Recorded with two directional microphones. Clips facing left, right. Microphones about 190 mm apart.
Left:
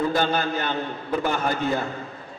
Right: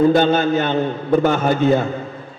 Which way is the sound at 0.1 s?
25° right (ahead or behind).